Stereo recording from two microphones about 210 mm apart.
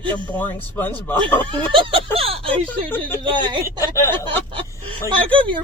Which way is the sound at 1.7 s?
25° right (ahead or behind).